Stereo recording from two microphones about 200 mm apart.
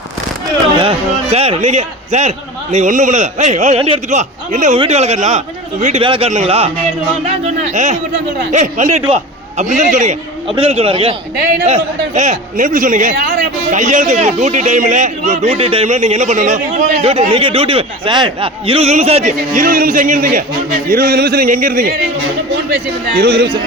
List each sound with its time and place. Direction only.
0.8 s a sound: 30° right (ahead or behind)
2.7 s a man's voice: 40° right (ahead or behind)
23.1 s speech: 50° right (ahead or behind)